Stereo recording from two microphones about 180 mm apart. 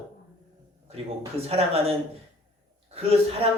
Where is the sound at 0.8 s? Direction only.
35° right (ahead or behind).